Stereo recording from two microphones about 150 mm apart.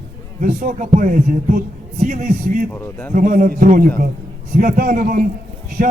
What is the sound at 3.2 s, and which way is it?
A man's voice, 60° right (ahead or behind).